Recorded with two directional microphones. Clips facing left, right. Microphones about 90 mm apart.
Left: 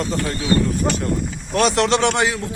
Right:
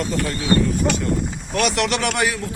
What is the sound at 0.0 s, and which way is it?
Speech, 30° left (ahead or behind).